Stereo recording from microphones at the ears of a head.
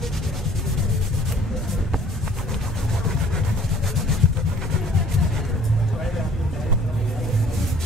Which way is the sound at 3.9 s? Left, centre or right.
Left.